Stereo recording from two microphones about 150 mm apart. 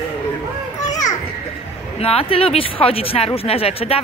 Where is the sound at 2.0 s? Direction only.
40° left (ahead or behind).